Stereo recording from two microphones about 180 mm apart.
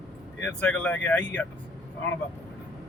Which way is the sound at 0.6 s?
5° left (ahead or behind).